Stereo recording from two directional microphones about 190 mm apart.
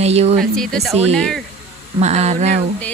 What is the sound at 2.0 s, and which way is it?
Speech, 35° right (ahead or behind).